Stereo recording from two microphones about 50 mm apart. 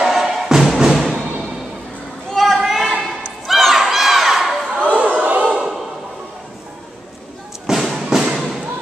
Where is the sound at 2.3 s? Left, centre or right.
Centre.